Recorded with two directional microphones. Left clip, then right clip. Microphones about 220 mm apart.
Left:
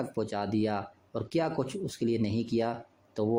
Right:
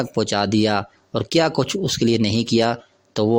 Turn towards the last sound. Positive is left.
turn(degrees=-35)  # may be behind; listen again after turning